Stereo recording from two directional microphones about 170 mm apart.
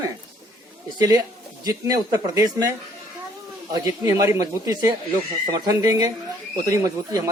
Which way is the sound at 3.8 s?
20° right (ahead or behind).